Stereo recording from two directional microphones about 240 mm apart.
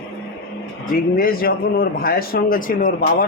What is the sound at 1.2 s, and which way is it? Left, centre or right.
A man's voice, left.